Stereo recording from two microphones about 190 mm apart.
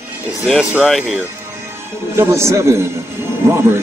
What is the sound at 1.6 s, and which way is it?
A man's voice, 15° right (ahead or behind).